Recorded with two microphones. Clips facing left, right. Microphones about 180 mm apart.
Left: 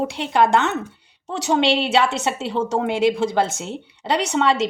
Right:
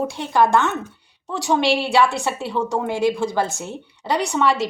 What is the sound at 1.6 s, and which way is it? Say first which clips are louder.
Speech: right 1 dB; 20° left (ahead or behind).